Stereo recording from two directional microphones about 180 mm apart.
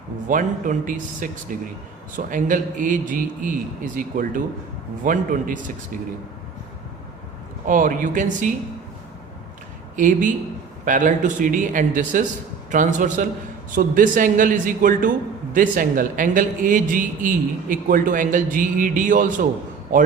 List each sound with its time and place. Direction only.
0.3 s a man's voice: 45° right (ahead or behind)
7.7 s a man's voice: 50° right (ahead or behind)
9.9 s a man's voice: 45° right (ahead or behind)